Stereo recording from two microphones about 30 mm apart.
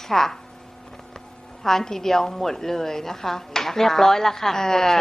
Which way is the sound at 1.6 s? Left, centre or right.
Centre.